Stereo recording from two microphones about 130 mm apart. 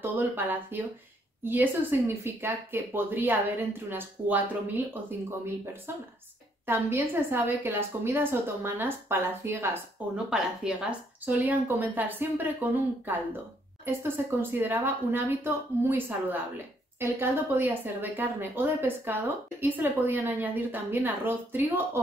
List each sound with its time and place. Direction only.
0.0 s speech: 15° right (ahead or behind)
5.9 s speech: 20° right (ahead or behind)
10.1 s speech: 5° right (ahead or behind)